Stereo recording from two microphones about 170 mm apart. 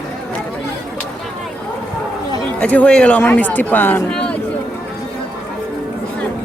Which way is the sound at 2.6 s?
10° left (ahead or behind).